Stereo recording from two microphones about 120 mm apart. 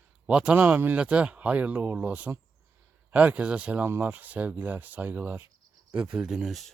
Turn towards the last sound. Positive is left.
turn(degrees=0)  # may be behind; listen again after turning